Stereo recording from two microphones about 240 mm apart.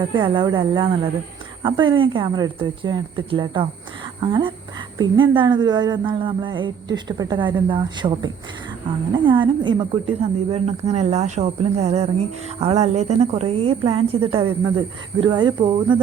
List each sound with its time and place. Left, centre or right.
0.1 s speech: centre